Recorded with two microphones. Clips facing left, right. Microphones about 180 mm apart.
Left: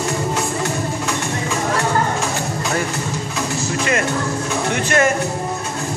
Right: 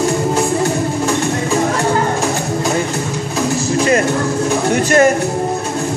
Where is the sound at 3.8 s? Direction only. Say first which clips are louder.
Right 6 dB; 35° right (ahead or behind).